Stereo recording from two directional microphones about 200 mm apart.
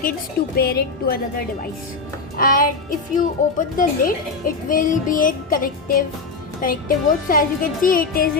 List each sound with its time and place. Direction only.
0.5 s a woman's voice: 50° left (ahead or behind)
2.4 s a woman's voice: 45° left (ahead or behind)